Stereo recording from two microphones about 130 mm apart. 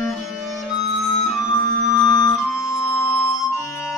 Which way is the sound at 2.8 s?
55° left (ahead or behind).